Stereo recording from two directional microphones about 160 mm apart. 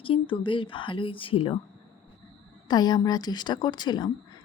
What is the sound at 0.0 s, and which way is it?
Speech, 35° left (ahead or behind).